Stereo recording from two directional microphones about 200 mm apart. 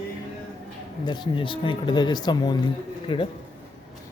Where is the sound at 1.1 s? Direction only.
25° left (ahead or behind).